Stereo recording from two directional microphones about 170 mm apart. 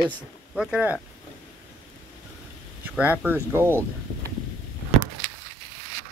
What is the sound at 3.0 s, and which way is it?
Speech, 10° right (ahead or behind).